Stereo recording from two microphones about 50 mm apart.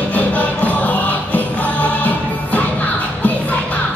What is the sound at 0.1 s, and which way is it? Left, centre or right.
Music, left.